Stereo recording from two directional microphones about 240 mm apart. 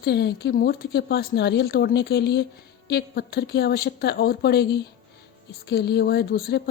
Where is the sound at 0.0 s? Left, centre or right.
Left.